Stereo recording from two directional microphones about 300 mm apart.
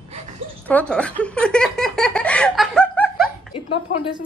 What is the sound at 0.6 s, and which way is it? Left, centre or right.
Speech, centre.